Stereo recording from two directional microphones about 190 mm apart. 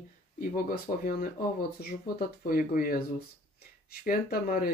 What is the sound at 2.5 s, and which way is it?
Speech, 50° left (ahead or behind).